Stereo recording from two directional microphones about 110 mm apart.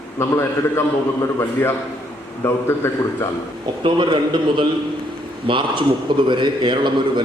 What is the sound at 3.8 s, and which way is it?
A man's voice, 45° right (ahead or behind).